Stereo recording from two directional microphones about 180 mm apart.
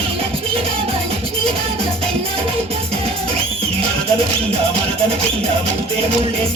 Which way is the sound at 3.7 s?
35° right (ahead or behind).